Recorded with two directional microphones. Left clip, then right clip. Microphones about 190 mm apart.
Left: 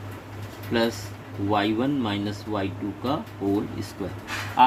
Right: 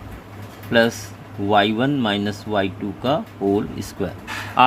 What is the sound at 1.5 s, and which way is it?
Speech, 55° right (ahead or behind).